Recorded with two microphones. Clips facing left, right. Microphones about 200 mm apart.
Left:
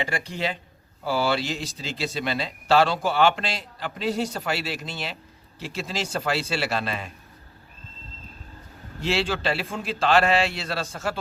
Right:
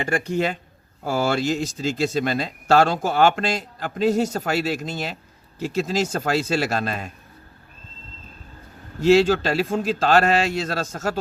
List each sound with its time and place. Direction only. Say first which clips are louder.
0.0 s speech: right 6 dB; 50° right (ahead or behind)
9.0 s speech: right 10 dB; 45° right (ahead or behind)